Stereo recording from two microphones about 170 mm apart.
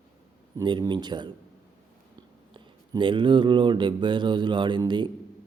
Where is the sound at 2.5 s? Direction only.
30° right (ahead or behind).